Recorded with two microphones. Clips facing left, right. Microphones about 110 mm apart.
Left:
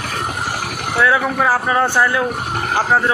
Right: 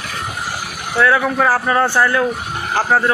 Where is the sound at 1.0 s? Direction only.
10° left (ahead or behind).